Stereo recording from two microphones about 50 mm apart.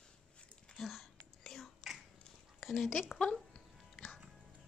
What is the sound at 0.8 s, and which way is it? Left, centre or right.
Whispering, centre.